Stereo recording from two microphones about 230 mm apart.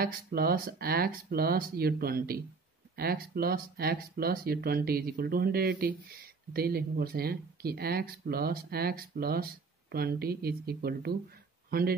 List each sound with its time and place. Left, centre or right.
0.0 s speech: right